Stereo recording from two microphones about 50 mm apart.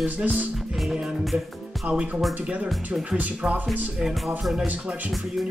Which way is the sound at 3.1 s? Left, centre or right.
Right.